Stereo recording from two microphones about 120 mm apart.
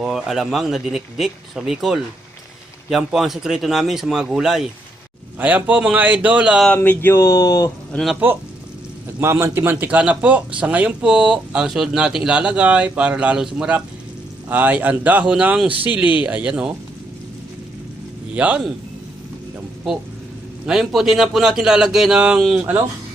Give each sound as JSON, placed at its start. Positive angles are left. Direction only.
{"t": 0.0, "sound": "a man's voice", "side_deg": -5}
{"t": 6.7, "sound": "speech", "side_deg": 15}
{"t": 7.9, "sound": "a man's voice", "side_deg": 0}
{"t": 9.2, "sound": "a man's voice", "side_deg": -20}
{"t": 18.3, "sound": "speech", "side_deg": -10}
{"t": 20.7, "sound": "a man's voice", "side_deg": -5}